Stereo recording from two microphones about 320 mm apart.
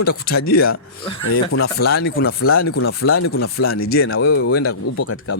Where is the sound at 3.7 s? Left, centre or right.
Left.